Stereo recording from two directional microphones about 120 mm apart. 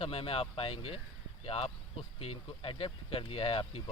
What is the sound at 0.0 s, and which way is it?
Speech, 50° left (ahead or behind).